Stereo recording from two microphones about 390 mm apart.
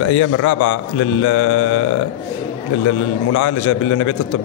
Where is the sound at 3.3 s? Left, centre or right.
Left.